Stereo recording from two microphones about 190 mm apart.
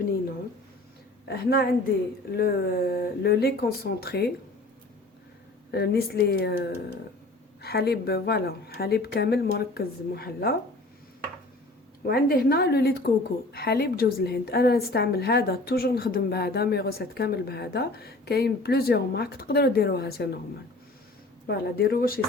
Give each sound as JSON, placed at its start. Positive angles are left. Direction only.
{"t": 1.3, "sound": "a woman's voice", "side_deg": 55}
{"t": 5.7, "sound": "a woman's voice", "side_deg": 55}
{"t": 12.0, "sound": "a woman's voice", "side_deg": 55}
{"t": 21.4, "sound": "speech", "side_deg": 55}